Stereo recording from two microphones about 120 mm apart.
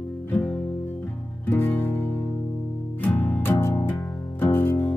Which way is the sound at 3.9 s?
10° left (ahead or behind).